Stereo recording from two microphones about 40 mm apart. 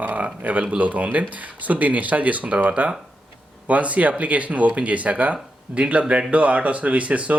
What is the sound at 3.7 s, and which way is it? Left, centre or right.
Speech, right.